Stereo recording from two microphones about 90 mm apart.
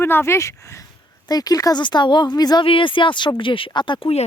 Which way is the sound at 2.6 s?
70° left (ahead or behind).